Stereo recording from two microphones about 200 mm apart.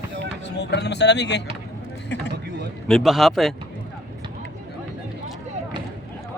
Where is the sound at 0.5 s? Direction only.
55° left (ahead or behind).